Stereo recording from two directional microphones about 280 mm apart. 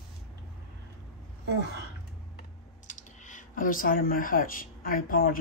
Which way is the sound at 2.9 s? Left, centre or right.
Left.